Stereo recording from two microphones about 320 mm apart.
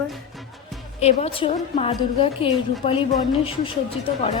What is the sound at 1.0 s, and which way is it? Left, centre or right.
Speech, centre.